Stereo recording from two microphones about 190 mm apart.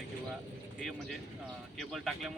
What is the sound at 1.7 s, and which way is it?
Speech, centre (ahead or behind).